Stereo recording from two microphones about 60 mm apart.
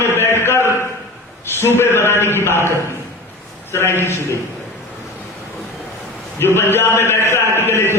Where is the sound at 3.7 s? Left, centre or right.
Left.